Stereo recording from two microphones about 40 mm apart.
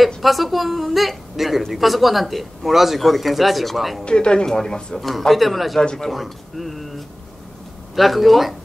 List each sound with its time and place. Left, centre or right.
0.2 s speech: centre
4.0 s speech: left
5.3 s speech: centre
5.8 s speech: left
6.0 s speech: centre